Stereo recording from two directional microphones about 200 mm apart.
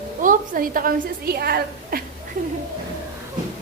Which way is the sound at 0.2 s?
45° right (ahead or behind).